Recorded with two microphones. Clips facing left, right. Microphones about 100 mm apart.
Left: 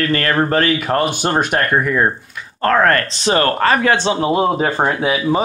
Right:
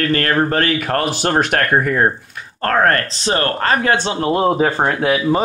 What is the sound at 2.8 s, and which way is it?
Speech, 35° right (ahead or behind).